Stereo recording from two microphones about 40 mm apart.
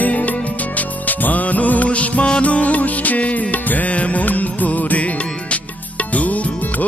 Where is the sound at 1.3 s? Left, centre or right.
Left.